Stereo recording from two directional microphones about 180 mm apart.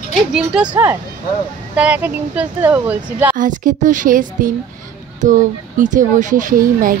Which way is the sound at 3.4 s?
45° right (ahead or behind).